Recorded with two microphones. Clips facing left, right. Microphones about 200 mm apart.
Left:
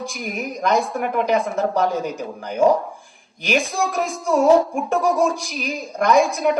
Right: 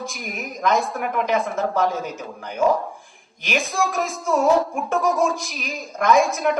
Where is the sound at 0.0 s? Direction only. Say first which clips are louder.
Left 4 dB; centre (ahead or behind).